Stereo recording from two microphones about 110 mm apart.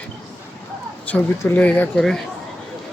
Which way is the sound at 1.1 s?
15° left (ahead or behind).